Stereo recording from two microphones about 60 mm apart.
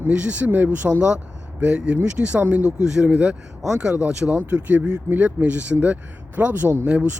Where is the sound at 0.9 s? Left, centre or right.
Centre.